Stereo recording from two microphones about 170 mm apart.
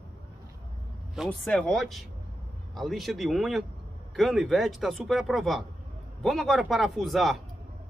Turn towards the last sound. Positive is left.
turn(degrees=0)  # may be behind; listen again after turning